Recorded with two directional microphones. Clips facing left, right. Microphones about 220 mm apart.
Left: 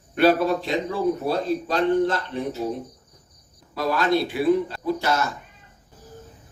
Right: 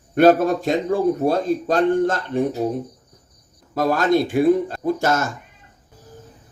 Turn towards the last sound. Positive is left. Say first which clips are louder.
# right 3 dB
turn(degrees=-45)  # may be behind; listen again after turning